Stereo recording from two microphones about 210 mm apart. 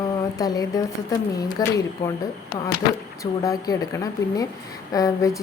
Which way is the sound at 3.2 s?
15° left (ahead or behind).